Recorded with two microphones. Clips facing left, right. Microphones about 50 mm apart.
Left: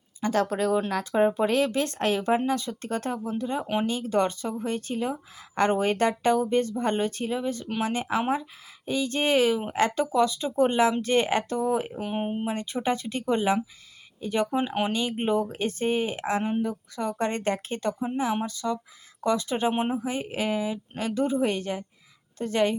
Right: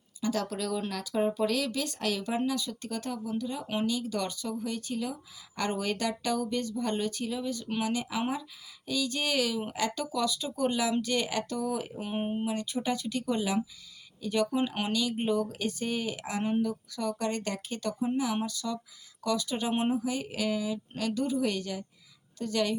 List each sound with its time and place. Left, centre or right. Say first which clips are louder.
0.2 s speech: left 6 dB; left
11.9 s speech: left 3 dB; centre
12.5 s speech: left 4 dB; left